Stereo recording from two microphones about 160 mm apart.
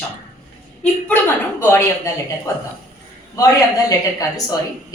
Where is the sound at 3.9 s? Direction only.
20° left (ahead or behind).